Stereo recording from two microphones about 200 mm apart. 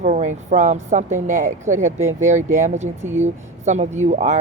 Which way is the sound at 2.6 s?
35° right (ahead or behind).